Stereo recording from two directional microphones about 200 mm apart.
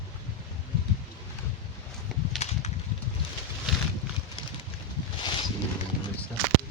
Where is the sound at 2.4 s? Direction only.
35° left (ahead or behind).